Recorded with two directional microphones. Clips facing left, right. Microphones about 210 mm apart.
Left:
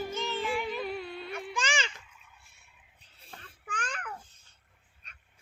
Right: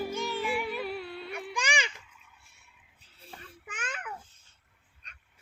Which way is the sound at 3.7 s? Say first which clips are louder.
Left 1 dB; 5° right (ahead or behind).